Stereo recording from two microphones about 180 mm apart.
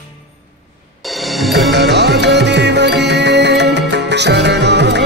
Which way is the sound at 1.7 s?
70° right (ahead or behind).